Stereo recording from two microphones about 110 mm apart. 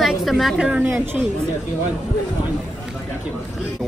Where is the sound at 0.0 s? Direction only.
Centre (ahead or behind).